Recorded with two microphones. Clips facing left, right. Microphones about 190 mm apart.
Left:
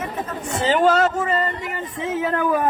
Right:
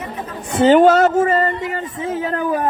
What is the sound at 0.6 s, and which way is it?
Speech, 50° right (ahead or behind).